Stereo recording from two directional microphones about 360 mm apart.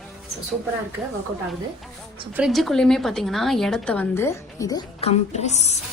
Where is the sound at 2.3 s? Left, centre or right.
Centre.